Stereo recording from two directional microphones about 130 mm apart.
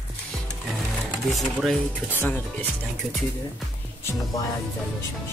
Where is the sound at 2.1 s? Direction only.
15° left (ahead or behind).